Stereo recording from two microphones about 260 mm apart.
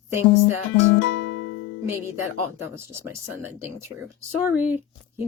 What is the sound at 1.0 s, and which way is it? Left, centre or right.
Music, left.